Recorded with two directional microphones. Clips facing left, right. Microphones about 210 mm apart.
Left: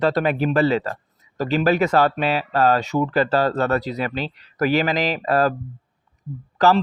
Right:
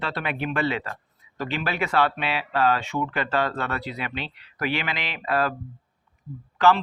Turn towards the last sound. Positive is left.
turn(degrees=40)  # may be behind; listen again after turning